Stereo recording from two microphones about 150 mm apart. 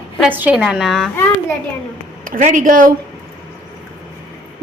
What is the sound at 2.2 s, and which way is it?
Speech, 65° right (ahead or behind).